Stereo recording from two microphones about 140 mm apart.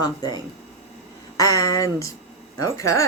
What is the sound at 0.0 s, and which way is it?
Speech, 30° left (ahead or behind).